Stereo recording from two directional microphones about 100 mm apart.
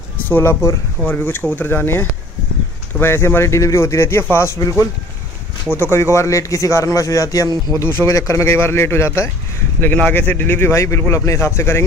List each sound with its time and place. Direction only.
0.3 s speech: 25° left (ahead or behind)
4.6 s a man's voice: 35° left (ahead or behind)
7.8 s speech: 25° left (ahead or behind)